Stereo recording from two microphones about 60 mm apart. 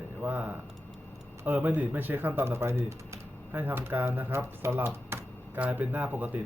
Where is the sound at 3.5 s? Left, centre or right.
Right.